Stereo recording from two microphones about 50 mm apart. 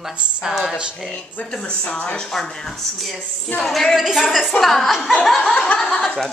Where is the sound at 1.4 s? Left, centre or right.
Centre.